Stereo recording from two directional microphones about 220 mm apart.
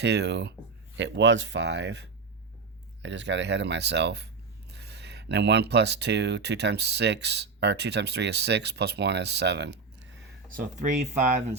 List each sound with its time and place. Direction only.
0.0 s speech: 50° right (ahead or behind)
10.5 s speech: 35° right (ahead or behind)